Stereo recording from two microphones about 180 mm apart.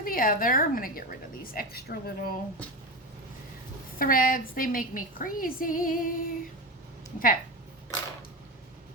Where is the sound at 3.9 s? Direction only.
50° left (ahead or behind).